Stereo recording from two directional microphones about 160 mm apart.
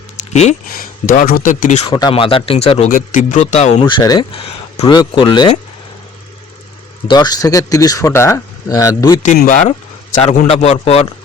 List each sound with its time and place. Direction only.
0.2 s a sound: 45° left (ahead or behind)
0.8 s speech: 60° left (ahead or behind)
1.9 s speech: 25° left (ahead or behind); by 2.9 s 40° left (ahead or behind)
2.9 s speech: 55° left (ahead or behind)
3.8 s speech: 25° left (ahead or behind)
7.1 s speech: 25° left (ahead or behind)
9.5 s speech: 50° left (ahead or behind)
10.2 s speech: 40° left (ahead or behind)